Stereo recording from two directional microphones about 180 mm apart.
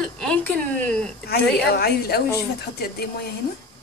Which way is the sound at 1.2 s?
60° left (ahead or behind).